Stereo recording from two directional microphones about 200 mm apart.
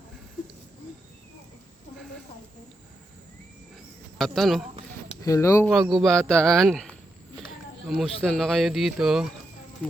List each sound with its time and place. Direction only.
4.2 s speech: centre (ahead or behind)
5.2 s speech: 15° left (ahead or behind)
5.9 s speech: centre (ahead or behind)